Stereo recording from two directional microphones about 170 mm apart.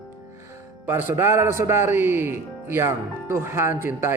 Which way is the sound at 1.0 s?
15° right (ahead or behind).